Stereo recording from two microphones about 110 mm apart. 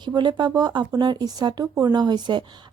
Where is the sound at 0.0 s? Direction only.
40° right (ahead or behind).